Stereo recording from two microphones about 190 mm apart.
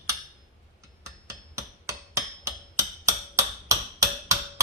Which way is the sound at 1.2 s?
15° right (ahead or behind).